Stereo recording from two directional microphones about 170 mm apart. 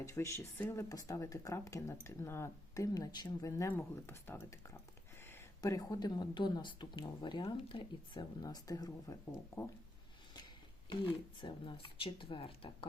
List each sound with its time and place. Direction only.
0.0 s speech: 20° left (ahead or behind)
11.3 s speech: 25° left (ahead or behind)